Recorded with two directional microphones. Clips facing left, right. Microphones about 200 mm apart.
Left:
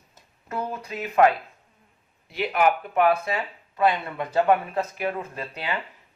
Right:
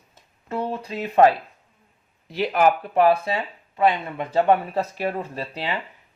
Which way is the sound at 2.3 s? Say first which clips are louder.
Right 3 dB; 40° right (ahead or behind).